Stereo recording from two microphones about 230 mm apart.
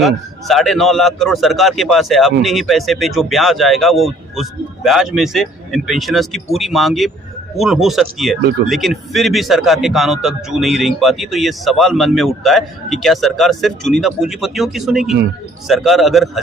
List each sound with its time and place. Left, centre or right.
0.0 s a man's voice: centre
8.4 s speech: right
9.1 s a man's voice: centre